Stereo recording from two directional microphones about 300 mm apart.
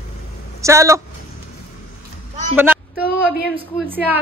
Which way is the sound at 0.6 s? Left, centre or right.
Centre.